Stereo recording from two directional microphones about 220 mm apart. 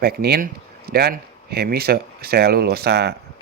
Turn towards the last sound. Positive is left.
turn(degrees=-50)  # may be behind; listen again after turning